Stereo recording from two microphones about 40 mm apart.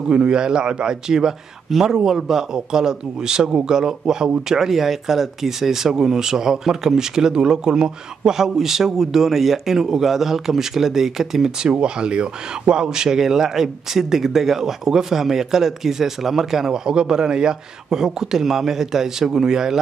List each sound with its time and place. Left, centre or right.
0.1 s speech: right
11.6 s speech: right
16.8 s speech: centre